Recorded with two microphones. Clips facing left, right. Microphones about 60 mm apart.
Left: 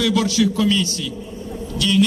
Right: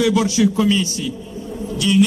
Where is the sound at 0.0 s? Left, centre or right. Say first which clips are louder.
Right 2 dB; centre.